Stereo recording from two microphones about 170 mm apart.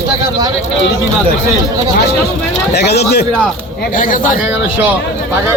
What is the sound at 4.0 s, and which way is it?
Speech, 55° left (ahead or behind).